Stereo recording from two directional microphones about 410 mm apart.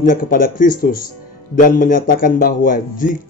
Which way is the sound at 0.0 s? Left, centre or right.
Centre.